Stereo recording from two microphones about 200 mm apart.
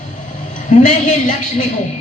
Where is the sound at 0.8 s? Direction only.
40° left (ahead or behind).